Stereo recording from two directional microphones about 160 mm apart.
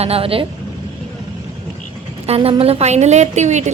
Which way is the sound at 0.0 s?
35° right (ahead or behind).